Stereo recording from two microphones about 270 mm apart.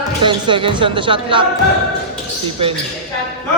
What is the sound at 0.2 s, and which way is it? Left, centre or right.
A woman's voice, centre.